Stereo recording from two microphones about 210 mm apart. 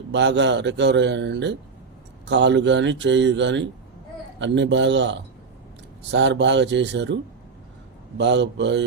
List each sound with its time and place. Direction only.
0.1 s speech: 60° right (ahead or behind)
8.2 s speech: 55° right (ahead or behind)